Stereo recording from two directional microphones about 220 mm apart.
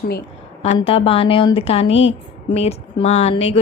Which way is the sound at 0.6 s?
25° left (ahead or behind).